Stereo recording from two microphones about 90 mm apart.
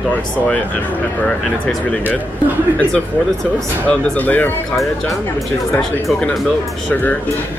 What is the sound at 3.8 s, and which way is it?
Speech, 15° left (ahead or behind).